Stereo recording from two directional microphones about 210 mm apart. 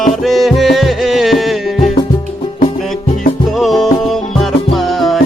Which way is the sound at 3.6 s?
Centre (ahead or behind).